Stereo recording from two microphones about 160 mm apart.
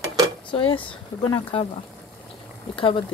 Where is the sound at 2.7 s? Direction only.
35° left (ahead or behind).